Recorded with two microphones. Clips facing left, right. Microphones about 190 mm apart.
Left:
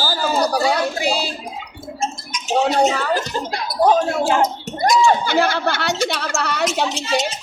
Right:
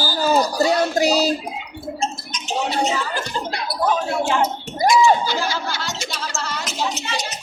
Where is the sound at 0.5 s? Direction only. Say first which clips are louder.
Even; 65° left (ahead or behind).